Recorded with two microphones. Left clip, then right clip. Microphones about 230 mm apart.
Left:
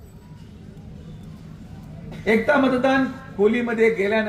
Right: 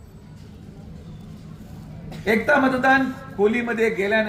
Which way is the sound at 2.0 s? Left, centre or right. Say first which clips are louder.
Even; right.